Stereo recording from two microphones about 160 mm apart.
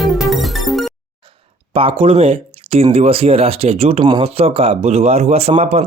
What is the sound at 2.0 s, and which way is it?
Speech, 40° right (ahead or behind).